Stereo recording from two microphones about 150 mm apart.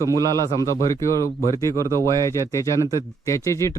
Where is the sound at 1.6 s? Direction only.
20° right (ahead or behind).